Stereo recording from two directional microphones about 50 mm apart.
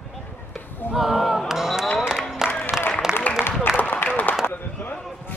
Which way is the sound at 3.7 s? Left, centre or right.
Left.